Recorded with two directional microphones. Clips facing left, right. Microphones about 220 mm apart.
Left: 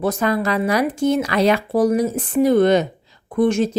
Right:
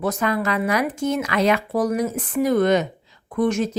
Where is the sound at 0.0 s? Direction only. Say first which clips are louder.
Left 3 dB; 30° left (ahead or behind).